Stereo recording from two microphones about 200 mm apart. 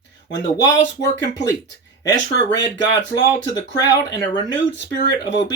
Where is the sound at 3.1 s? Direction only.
20° left (ahead or behind).